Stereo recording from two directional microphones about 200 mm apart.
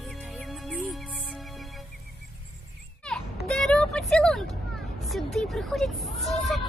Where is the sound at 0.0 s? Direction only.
Centre (ahead or behind).